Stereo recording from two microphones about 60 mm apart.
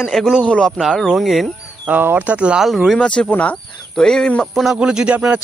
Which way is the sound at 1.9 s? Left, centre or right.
Right.